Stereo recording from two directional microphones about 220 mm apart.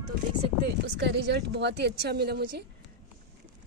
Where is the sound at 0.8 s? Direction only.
50° right (ahead or behind).